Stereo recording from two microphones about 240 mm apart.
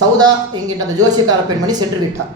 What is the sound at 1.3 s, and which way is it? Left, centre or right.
Speech, centre.